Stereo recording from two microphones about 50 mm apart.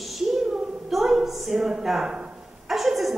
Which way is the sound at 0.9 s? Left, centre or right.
Centre.